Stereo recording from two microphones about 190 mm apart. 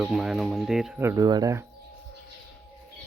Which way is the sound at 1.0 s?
15° right (ahead or behind).